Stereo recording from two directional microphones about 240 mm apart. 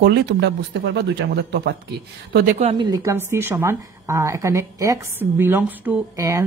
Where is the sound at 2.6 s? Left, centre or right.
Right.